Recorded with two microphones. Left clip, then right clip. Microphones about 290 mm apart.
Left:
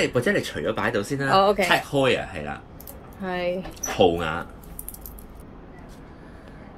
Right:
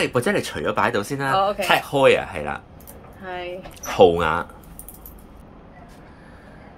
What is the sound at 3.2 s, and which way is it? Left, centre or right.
Speech, left.